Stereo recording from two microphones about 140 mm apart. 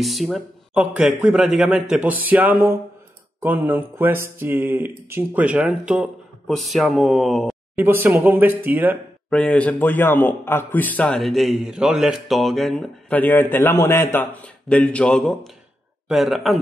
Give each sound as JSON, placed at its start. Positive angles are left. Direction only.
{"t": 0.0, "sound": "speech", "side_deg": 0}
{"t": 7.7, "sound": "speech", "side_deg": -15}
{"t": 9.3, "sound": "speech", "side_deg": 10}